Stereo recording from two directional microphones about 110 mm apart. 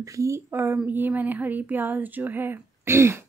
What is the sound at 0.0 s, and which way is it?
Speech, 30° right (ahead or behind).